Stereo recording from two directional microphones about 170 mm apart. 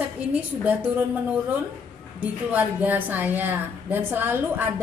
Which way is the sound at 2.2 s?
10° right (ahead or behind).